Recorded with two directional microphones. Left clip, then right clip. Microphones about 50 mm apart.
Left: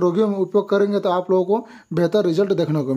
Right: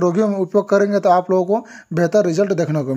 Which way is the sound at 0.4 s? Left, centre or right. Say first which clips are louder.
Right 3 dB; right.